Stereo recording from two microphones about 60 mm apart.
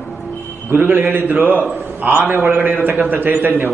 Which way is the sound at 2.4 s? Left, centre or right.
Right.